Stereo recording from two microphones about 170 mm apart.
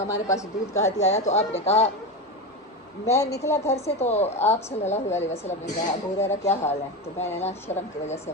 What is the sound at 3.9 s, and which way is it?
A woman's voice, 40° left (ahead or behind).